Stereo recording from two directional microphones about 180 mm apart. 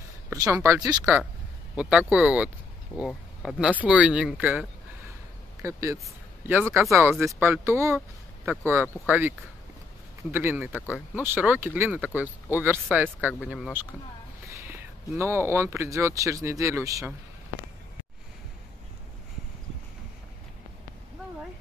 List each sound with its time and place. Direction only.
0.4 s speech: 15° right (ahead or behind)
1.8 s speech: 5° right (ahead or behind)
5.6 s speech: 15° right (ahead or behind)
10.3 s speech: 10° right (ahead or behind)